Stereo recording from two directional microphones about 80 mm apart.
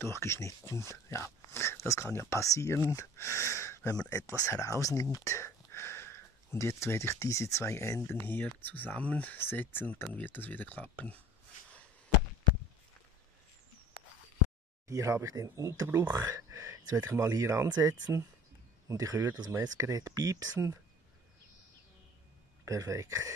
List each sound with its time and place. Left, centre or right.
0.0 s speech: left
14.9 s speech: right
17.6 s speech: right
18.9 s speech: right
22.7 s speech: right